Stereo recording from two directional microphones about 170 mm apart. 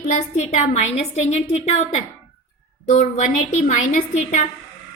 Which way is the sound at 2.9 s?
45° left (ahead or behind).